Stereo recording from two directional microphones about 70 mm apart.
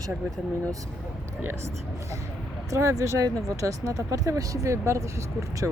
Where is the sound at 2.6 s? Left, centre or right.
Right.